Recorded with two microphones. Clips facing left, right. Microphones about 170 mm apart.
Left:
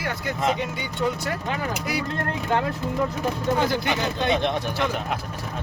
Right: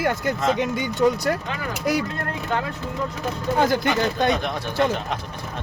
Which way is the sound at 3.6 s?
45° right (ahead or behind).